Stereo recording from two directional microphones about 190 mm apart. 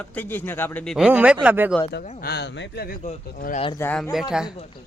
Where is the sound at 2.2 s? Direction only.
60° left (ahead or behind).